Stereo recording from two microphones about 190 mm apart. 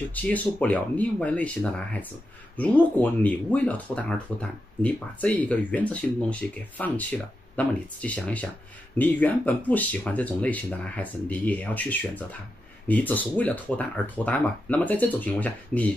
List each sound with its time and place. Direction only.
0.1 s speech: 10° left (ahead or behind)